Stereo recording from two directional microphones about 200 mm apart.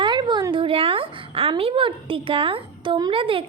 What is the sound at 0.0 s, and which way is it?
A woman's voice, 20° right (ahead or behind).